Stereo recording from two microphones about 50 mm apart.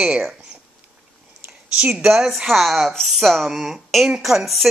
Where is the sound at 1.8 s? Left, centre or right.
Centre.